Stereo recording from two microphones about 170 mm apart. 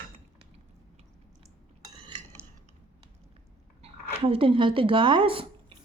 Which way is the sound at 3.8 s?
35° right (ahead or behind).